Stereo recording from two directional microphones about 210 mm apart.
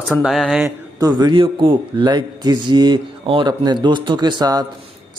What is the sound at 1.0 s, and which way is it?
A man's voice, 20° right (ahead or behind).